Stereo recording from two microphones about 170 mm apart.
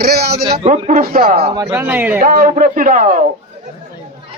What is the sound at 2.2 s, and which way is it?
Speech, 55° right (ahead or behind).